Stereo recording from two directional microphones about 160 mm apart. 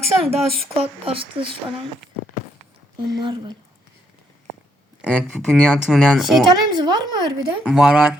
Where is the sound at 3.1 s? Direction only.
30° right (ahead or behind).